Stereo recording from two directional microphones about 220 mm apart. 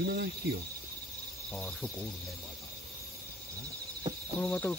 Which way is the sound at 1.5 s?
5° left (ahead or behind).